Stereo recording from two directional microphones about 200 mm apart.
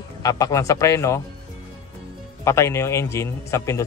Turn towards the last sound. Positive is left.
turn(degrees=15)  # may be behind; listen again after turning